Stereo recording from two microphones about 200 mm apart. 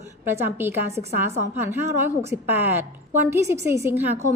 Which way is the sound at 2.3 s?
10° right (ahead or behind).